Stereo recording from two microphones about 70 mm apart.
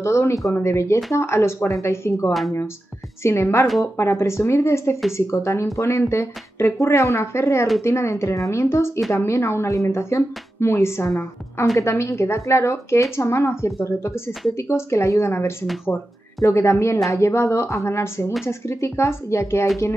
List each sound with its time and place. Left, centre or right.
0.0 s speech: left